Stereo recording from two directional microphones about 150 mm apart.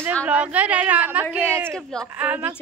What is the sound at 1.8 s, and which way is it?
Speech, 5° left (ahead or behind).